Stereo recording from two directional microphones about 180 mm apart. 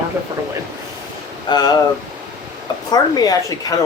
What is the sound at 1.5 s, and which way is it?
Speech, 20° left (ahead or behind).